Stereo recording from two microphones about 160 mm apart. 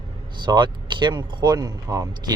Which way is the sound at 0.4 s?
30° right (ahead or behind).